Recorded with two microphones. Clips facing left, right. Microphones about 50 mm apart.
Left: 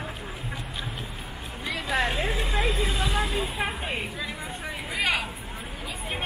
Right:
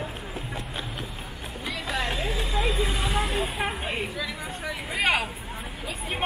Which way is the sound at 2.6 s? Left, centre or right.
Centre.